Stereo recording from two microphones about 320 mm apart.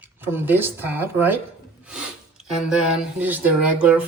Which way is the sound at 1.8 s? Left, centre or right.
Centre.